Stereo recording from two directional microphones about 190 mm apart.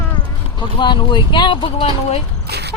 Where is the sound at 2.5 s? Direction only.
60° right (ahead or behind).